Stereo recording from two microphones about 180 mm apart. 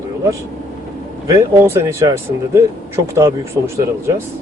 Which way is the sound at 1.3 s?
15° right (ahead or behind).